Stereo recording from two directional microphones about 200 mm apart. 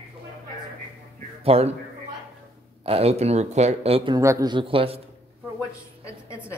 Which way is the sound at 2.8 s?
30° right (ahead or behind).